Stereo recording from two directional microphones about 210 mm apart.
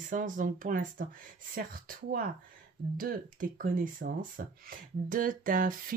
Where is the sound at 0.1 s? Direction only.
40° right (ahead or behind).